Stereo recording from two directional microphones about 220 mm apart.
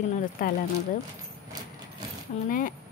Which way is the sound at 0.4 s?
40° left (ahead or behind).